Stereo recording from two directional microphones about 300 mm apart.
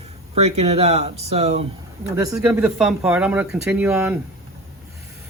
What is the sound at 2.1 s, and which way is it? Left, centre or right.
Speech, centre.